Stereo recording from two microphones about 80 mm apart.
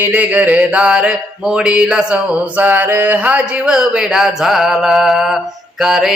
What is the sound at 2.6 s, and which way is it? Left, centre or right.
Mantra, right.